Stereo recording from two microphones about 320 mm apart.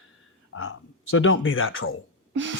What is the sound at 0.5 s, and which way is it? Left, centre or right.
Speech, left.